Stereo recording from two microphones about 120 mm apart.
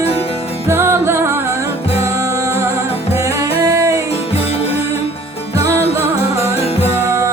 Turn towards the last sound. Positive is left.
turn(degrees=-20)  # may be behind; listen again after turning